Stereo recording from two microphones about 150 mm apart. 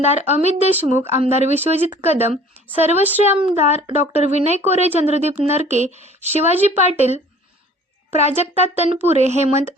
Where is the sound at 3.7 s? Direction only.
45° right (ahead or behind).